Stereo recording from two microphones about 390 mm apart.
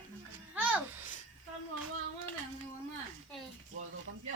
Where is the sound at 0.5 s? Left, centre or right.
Centre.